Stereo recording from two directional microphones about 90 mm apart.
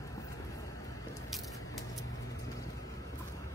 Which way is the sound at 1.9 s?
40° left (ahead or behind).